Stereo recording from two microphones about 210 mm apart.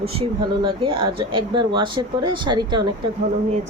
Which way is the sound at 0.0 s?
30° right (ahead or behind).